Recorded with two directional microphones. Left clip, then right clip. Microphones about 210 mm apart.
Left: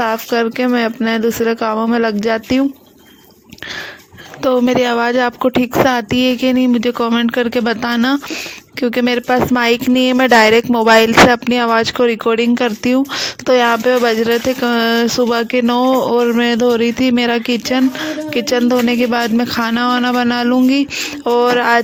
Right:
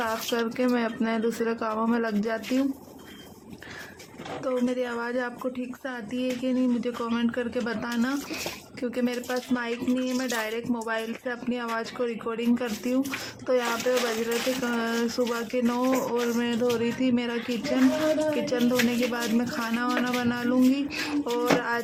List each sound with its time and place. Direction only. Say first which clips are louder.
0.0 s speech: left 12 dB; 35° left (ahead or behind)
4.4 s speech: left 15 dB; 40° left (ahead or behind)
21.2 s speech: left 15 dB; 45° left (ahead or behind)